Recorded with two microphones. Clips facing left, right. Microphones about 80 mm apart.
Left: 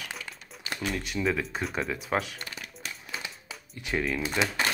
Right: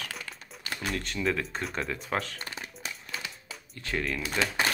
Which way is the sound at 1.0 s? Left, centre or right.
Centre.